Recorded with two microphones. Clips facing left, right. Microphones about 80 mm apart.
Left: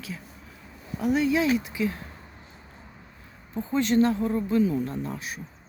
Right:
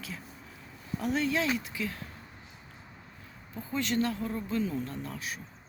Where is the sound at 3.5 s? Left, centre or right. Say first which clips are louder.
Left 8 dB; left.